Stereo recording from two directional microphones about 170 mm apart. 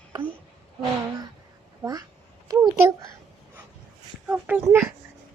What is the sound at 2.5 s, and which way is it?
Speech, 20° right (ahead or behind).